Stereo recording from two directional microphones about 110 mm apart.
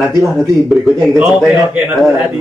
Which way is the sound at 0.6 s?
Centre (ahead or behind).